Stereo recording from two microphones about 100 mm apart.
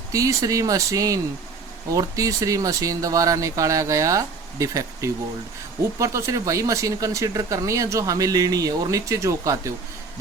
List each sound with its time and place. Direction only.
0.1 s speech: 35° right (ahead or behind)